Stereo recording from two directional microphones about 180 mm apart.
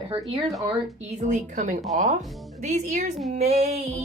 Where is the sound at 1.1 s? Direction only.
45° right (ahead or behind).